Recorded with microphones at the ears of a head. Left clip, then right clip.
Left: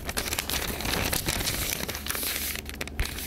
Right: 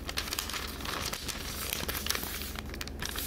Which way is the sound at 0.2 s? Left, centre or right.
Left.